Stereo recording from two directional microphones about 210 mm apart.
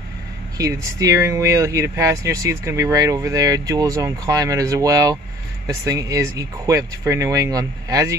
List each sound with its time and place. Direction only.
0.6 s speech: 15° right (ahead or behind)